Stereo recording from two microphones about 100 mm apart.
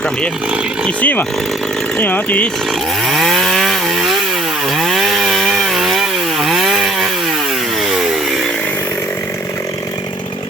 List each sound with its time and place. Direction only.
0.9 s speech: 15° left (ahead or behind)
3.1 s chainsaw: centre (ahead or behind)